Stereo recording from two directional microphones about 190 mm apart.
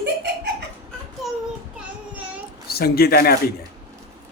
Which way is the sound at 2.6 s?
55° left (ahead or behind).